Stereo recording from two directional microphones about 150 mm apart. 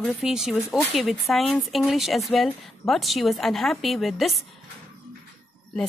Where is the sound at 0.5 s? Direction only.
20° left (ahead or behind).